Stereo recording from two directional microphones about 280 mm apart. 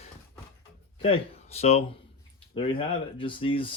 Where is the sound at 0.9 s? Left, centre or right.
Left.